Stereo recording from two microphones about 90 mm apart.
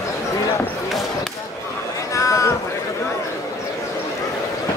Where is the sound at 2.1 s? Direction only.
35° left (ahead or behind).